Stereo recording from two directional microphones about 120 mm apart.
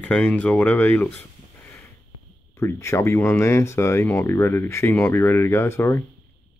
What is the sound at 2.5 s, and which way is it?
Speech, 25° left (ahead or behind).